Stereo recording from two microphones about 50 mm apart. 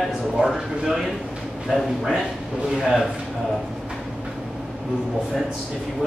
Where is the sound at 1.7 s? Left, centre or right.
Centre.